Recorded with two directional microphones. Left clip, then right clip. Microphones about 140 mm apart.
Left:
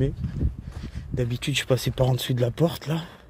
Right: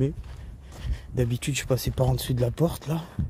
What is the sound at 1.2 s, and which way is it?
Speech, 10° right (ahead or behind).